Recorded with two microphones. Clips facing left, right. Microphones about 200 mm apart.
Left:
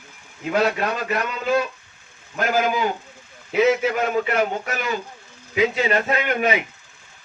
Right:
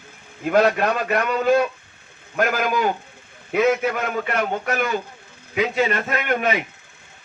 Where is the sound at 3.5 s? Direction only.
55° right (ahead or behind).